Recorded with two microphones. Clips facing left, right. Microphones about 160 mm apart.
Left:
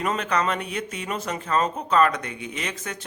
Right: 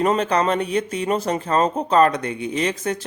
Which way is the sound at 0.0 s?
30° right (ahead or behind).